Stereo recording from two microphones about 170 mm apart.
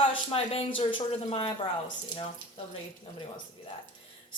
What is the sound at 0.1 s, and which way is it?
A woman's voice, 35° left (ahead or behind).